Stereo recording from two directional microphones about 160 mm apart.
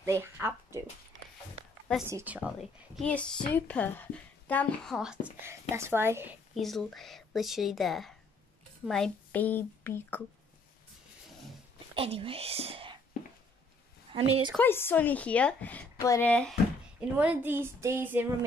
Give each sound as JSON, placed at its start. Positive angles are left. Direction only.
{"t": 0.0, "sound": "speech", "side_deg": -15}
{"t": 2.0, "sound": "child singing", "side_deg": -15}
{"t": 3.0, "sound": "speech", "side_deg": 5}
{"t": 5.4, "sound": "child singing", "side_deg": -15}
{"t": 6.6, "sound": "a woman's voice", "side_deg": 0}
{"t": 11.9, "sound": "speech", "side_deg": -35}
{"t": 14.1, "sound": "a woman's voice", "side_deg": -35}
{"t": 14.6, "sound": "speech", "side_deg": 15}
{"t": 17.2, "sound": "child singing", "side_deg": -10}